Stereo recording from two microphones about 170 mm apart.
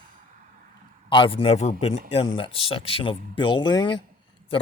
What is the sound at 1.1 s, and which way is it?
A man's voice, 30° left (ahead or behind).